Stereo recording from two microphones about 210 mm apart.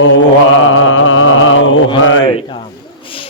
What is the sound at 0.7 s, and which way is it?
Mantra, 70° left (ahead or behind).